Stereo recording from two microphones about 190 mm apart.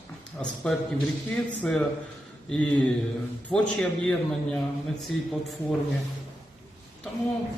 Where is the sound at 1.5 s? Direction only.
5° left (ahead or behind).